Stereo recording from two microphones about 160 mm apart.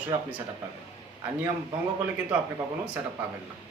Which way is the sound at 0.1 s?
20° right (ahead or behind).